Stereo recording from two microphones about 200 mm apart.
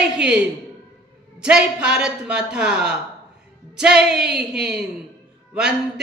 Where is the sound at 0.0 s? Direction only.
5° right (ahead or behind).